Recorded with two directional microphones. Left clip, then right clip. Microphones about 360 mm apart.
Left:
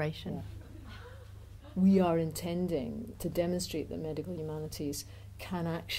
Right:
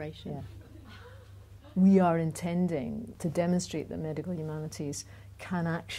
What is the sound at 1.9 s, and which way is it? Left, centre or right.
Speech, right.